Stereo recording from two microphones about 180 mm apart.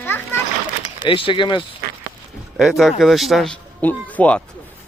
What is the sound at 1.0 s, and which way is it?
Speech, 30° left (ahead or behind).